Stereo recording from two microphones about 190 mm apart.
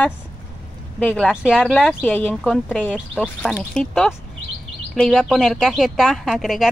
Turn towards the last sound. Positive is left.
turn(degrees=0)  # may be behind; listen again after turning